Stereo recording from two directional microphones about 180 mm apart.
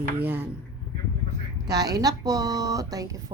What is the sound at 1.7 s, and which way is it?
Speech, 20° right (ahead or behind).